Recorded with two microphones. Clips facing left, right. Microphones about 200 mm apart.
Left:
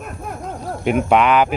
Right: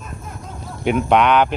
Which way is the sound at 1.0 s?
5° left (ahead or behind).